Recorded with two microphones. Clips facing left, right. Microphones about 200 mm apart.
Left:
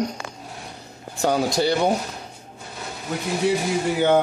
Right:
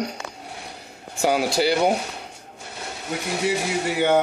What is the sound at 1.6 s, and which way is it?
Speech, 5° right (ahead or behind).